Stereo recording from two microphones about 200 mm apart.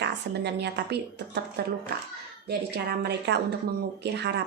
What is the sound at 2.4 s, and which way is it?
A woman's voice, 55° right (ahead or behind).